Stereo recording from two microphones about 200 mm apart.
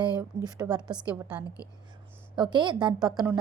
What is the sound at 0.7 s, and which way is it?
Speech, 5° right (ahead or behind).